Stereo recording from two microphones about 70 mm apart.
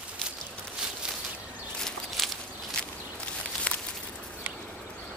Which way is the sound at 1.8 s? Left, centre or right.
Centre.